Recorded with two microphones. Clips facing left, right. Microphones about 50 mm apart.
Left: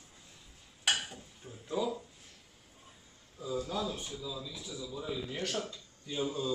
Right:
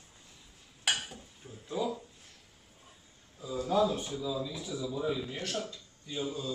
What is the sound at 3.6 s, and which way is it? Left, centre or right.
A man's voice, right.